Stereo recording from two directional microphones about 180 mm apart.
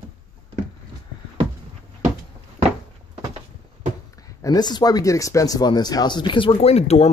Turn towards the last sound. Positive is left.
turn(degrees=35)  # may be behind; listen again after turning